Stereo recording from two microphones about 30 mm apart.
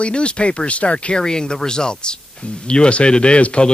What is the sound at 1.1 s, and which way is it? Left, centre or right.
Speech, left.